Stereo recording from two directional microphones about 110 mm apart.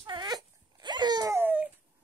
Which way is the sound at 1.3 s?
15° right (ahead or behind).